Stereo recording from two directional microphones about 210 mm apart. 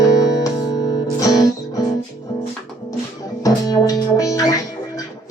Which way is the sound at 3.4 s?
15° left (ahead or behind).